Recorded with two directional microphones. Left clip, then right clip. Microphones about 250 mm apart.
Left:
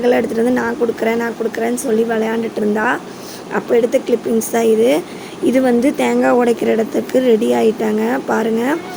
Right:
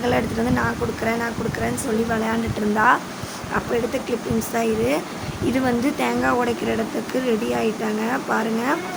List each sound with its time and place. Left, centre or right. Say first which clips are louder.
0.0 s speech: left 7 dB; centre